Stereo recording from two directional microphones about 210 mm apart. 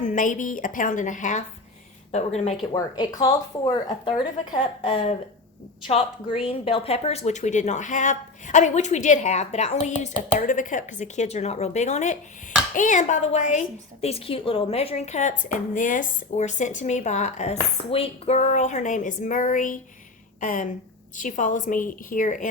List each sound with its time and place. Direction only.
0.0 s a woman's voice: 40° left (ahead or behind)
2.7 s a woman's voice: 20° left (ahead or behind); by 22.4 s 40° left (ahead or behind)